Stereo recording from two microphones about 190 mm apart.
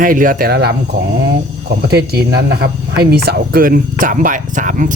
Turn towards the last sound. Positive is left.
turn(degrees=-45)  # may be behind; listen again after turning